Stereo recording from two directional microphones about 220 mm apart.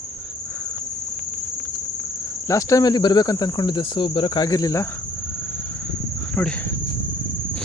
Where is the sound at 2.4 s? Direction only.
15° left (ahead or behind).